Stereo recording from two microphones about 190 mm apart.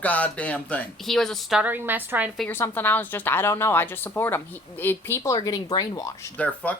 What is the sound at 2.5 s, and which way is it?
A woman's voice, 10° left (ahead or behind).